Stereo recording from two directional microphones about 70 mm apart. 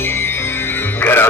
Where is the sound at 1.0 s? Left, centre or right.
Left.